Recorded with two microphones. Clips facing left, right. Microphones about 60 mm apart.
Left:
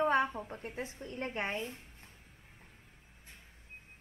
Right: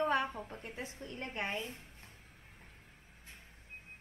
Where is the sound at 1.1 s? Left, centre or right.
Left.